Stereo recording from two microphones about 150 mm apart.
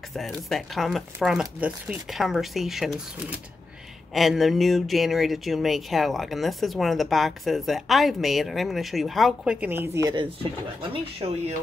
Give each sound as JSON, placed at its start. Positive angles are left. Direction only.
{"t": 0.1, "sound": "speech", "side_deg": 0}
{"t": 10.9, "sound": "speech", "side_deg": -40}